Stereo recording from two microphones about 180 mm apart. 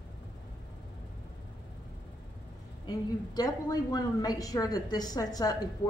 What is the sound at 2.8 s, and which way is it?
A woman's voice, 20° left (ahead or behind).